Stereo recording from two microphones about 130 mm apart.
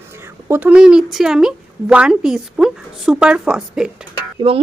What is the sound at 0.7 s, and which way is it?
Speech, 5° right (ahead or behind).